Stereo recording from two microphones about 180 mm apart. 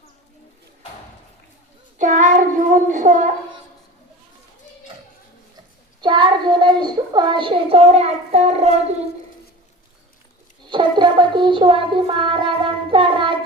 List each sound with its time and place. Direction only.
2.0 s child singing: 45° right (ahead or behind)
2.6 s a sound: 45° right (ahead or behind)
6.0 s child singing: 25° right (ahead or behind)
10.7 s music: 25° right (ahead or behind)